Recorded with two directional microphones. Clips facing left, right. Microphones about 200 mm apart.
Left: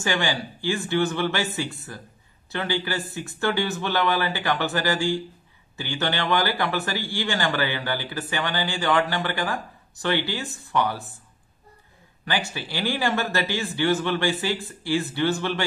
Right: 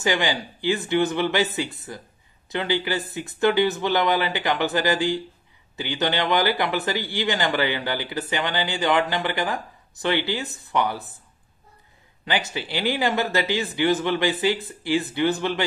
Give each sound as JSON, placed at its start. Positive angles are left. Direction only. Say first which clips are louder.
{"t": 0.0, "sound": "speech", "louder": "right 2 dB", "side_deg": -20}
{"t": 12.3, "sound": "speech", "louder": "right 2 dB", "side_deg": -20}